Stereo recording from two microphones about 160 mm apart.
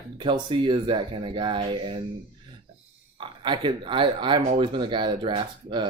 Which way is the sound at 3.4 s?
30° right (ahead or behind).